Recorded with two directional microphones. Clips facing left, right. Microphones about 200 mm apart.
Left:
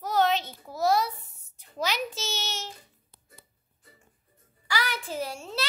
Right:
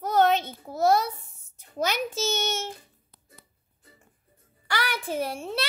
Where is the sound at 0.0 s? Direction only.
50° right (ahead or behind).